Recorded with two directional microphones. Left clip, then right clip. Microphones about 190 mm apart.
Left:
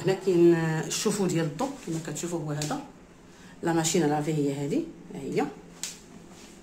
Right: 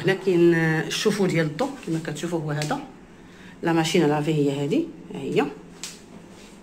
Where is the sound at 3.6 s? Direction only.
15° left (ahead or behind).